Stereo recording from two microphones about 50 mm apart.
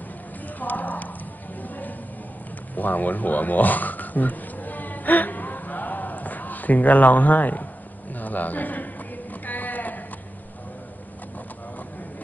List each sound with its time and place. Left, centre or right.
0.6 s clip-clop: left
1.6 s music: left
2.7 s a sound: left
9.5 s sheep: left